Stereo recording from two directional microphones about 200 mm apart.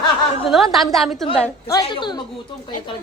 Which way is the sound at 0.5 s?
Centre (ahead or behind).